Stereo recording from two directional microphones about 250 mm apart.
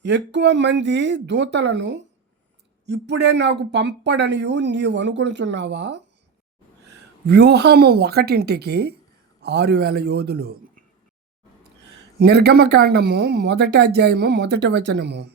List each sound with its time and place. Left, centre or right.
0.0 s speech: right
7.3 s a man's voice: right
12.2 s speech: right